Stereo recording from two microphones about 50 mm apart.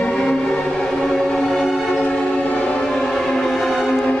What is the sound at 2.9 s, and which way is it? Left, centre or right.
Music, centre.